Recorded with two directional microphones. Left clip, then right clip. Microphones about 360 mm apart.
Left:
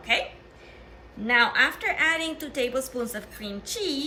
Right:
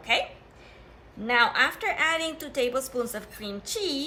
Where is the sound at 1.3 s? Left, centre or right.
Centre.